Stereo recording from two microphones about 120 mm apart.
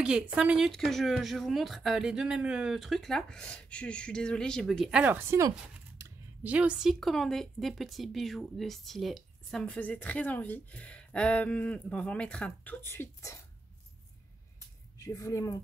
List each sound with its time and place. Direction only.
0.0 s a woman's voice: 5° right (ahead or behind)
0.7 s speech: 5° left (ahead or behind)
6.4 s speech: 10° right (ahead or behind); by 13.4 s 20° left (ahead or behind)
15.0 s a woman's voice: 25° left (ahead or behind)